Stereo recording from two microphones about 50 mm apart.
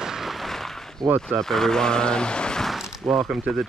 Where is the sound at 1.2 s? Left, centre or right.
Centre.